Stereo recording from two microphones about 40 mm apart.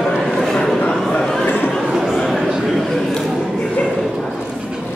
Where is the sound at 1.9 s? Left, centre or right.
Centre.